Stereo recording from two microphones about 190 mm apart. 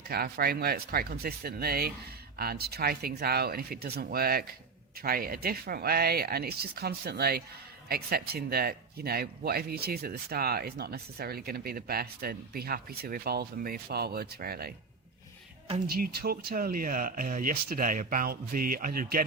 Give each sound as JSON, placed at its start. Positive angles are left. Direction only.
{"t": 0.1, "sound": "speech", "side_deg": -55}
{"t": 15.9, "sound": "speech", "side_deg": -55}